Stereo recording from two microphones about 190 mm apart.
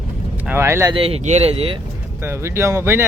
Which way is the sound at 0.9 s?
30° right (ahead or behind).